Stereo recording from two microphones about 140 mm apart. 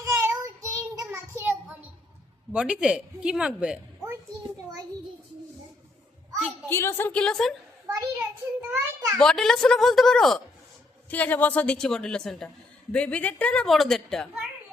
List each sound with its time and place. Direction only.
0.0 s child singing: 20° right (ahead or behind)
2.5 s speech: 10° right (ahead or behind)
6.7 s a woman's voice: 15° left (ahead or behind)
7.9 s a sound: 15° right (ahead or behind)
9.1 s a woman's voice: 5° left (ahead or behind)